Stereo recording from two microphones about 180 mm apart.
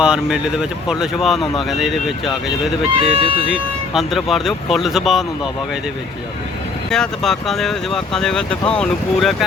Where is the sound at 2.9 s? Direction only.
30° right (ahead or behind).